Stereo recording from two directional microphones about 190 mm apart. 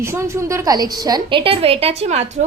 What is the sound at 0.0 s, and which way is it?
A woman's voice, 15° right (ahead or behind).